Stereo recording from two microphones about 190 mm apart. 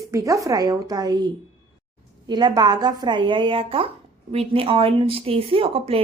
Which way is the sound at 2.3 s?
20° right (ahead or behind).